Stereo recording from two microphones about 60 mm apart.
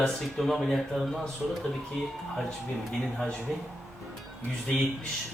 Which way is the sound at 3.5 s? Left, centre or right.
Centre.